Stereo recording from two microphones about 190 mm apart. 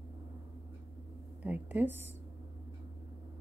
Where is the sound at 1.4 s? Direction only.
10° right (ahead or behind).